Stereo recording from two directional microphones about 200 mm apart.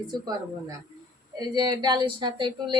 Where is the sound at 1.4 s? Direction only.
20° right (ahead or behind).